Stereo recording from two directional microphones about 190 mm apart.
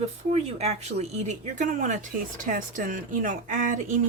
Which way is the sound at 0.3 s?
35° right (ahead or behind).